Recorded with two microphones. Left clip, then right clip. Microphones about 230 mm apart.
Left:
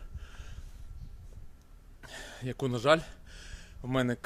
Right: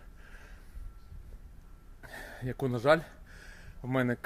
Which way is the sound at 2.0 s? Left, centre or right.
Centre.